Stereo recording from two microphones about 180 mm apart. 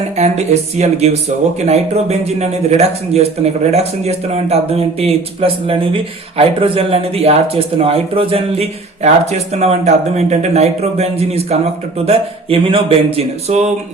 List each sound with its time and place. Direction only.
0.2 s a man's voice: 40° right (ahead or behind)